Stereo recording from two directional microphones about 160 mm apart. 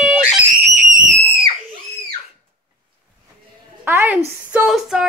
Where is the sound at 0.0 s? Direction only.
5° right (ahead or behind).